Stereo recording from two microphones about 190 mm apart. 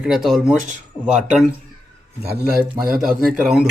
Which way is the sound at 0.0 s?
Centre (ahead or behind).